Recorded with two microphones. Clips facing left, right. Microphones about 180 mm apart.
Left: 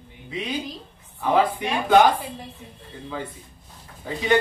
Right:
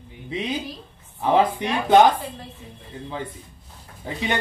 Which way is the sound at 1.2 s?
20° right (ahead or behind).